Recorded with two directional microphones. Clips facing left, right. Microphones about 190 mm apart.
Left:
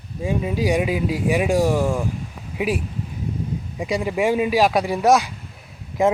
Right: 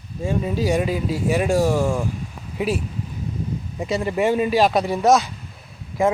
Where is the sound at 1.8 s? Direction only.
Centre (ahead or behind).